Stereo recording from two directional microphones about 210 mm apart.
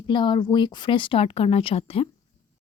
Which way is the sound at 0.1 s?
20° left (ahead or behind).